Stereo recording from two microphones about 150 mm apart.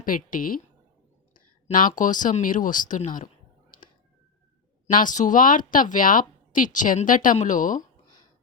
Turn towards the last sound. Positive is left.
turn(degrees=60)  # may be behind; listen again after turning